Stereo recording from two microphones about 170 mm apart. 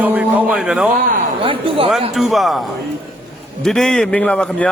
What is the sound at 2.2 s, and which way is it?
A man's voice, centre (ahead or behind).